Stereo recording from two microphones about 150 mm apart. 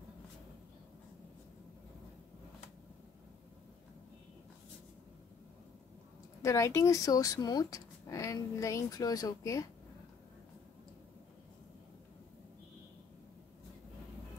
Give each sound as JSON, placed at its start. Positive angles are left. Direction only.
{"t": 6.4, "sound": "speech", "side_deg": 20}